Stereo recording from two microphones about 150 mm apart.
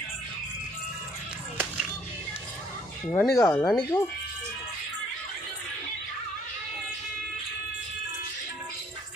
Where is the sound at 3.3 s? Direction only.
20° left (ahead or behind).